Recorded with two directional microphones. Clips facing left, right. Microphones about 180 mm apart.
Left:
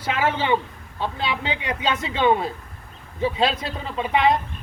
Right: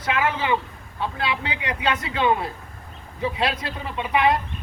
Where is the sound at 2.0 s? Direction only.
25° left (ahead or behind).